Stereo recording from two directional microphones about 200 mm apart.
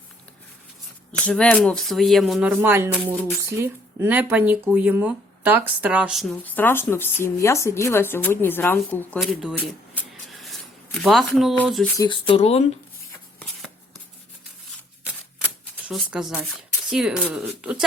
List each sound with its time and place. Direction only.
1.2 s speech: 5° left (ahead or behind)
9.9 s a sound: centre (ahead or behind)
11.0 s speech: centre (ahead or behind)
11.9 s speech: 25° left (ahead or behind)
15.9 s speech: centre (ahead or behind)